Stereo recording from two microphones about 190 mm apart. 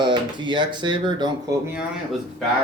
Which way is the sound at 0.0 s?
25° right (ahead or behind).